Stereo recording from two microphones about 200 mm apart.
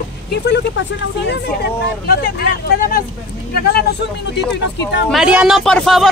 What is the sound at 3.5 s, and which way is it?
Speech, 55° left (ahead or behind).